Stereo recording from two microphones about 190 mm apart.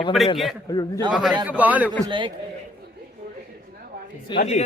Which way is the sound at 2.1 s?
25° right (ahead or behind).